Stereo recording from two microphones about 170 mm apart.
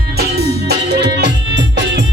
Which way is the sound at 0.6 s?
80° right.